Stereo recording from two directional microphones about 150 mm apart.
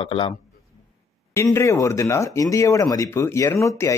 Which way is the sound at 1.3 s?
20° left (ahead or behind).